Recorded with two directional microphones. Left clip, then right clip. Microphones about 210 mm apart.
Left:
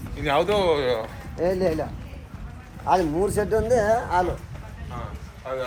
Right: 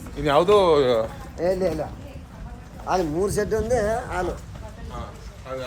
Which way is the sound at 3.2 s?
20° left (ahead or behind).